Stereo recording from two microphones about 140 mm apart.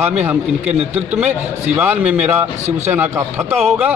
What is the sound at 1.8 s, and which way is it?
Music, 10° right (ahead or behind).